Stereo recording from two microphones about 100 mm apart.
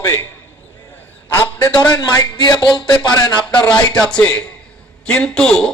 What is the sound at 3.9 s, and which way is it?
A man's voice, 10° left (ahead or behind).